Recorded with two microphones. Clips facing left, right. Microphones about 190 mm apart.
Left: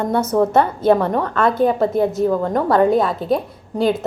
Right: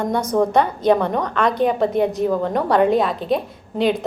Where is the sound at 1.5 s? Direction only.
20° right (ahead or behind).